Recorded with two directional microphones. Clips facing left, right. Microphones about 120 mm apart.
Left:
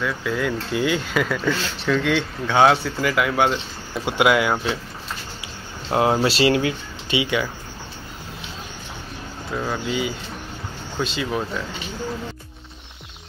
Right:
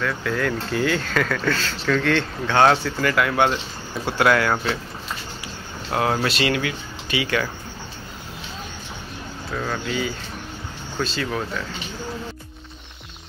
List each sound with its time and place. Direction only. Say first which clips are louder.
0.0 s speech: even; 10° left (ahead or behind)
5.9 s speech: left 3 dB; 20° left (ahead or behind)
9.5 s speech: left 1 dB; 10° left (ahead or behind)